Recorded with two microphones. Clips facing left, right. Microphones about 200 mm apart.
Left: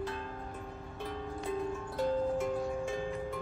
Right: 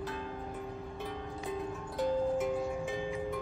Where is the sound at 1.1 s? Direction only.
Centre (ahead or behind).